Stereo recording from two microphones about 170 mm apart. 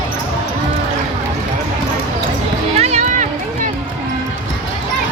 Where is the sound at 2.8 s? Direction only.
40° right (ahead or behind).